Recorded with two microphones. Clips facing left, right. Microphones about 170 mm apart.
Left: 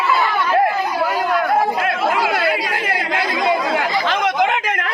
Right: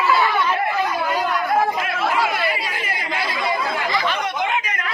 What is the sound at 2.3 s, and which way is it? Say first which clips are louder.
Chatter: left 5 dB; 75° left (ahead or behind).